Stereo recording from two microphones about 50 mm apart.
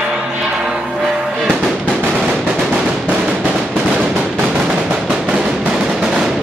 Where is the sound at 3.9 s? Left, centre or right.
Centre.